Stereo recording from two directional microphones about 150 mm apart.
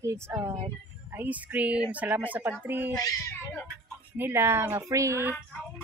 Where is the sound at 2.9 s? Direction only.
25° left (ahead or behind).